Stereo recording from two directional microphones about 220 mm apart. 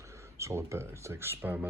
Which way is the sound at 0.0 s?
15° right (ahead or behind).